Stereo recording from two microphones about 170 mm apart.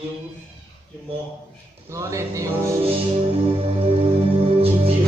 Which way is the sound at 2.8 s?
35° right (ahead or behind).